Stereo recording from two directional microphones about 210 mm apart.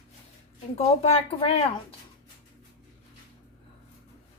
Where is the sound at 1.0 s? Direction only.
30° left (ahead or behind).